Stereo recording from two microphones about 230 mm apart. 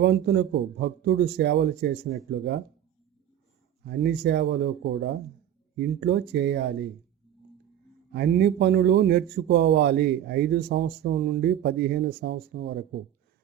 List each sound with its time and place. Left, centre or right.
0.0 s a man's voice: right
3.8 s a man's voice: right
8.1 s a man's voice: right